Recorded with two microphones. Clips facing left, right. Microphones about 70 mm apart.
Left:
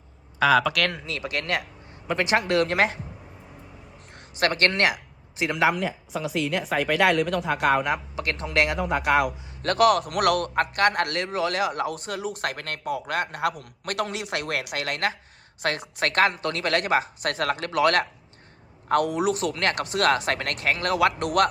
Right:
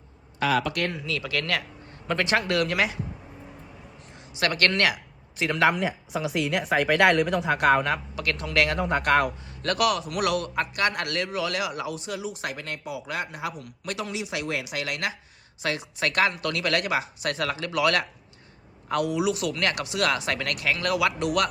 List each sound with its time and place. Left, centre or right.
0.7 s speech: left
1.0 s a man's voice: left
4.4 s a man's voice: left
5.4 s speech: centre
5.7 s a woman's voice: centre
8.1 s a man's voice: left
8.8 s a woman's voice: centre
9.6 s speech: left
10.0 s a man's voice: left